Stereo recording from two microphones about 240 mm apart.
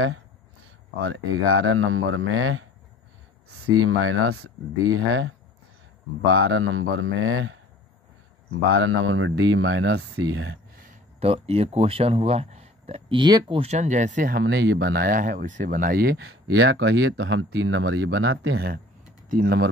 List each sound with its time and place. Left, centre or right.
1.0 s speech: right
3.7 s speech: right
10.8 s speech: right
14.4 s speech: right
16.3 s speech: right
19.2 s speech: right